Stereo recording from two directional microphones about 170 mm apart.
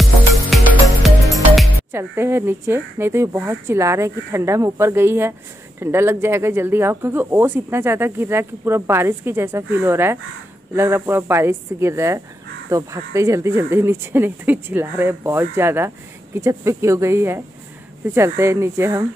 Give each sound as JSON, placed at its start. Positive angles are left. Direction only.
{"t": 1.0, "sound": "music", "side_deg": 0}
{"t": 1.9, "sound": "speech", "side_deg": -15}